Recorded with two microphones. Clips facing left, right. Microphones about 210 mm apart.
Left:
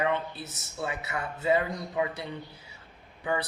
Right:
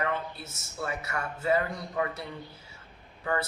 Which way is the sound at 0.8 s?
20° left (ahead or behind).